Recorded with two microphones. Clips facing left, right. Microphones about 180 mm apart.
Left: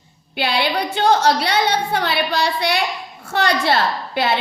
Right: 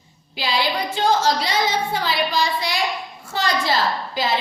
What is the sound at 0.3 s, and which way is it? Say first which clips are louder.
A woman's voice: left 3 dB; 65° left (ahead or behind).